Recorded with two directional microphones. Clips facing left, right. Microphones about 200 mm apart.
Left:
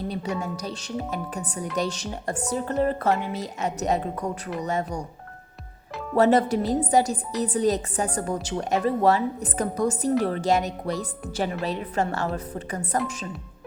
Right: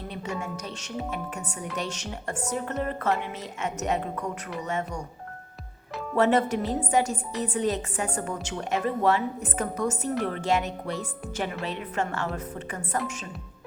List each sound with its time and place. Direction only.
0.5 s a woman's voice: 35° left (ahead or behind)
6.1 s a woman's voice: 35° left (ahead or behind)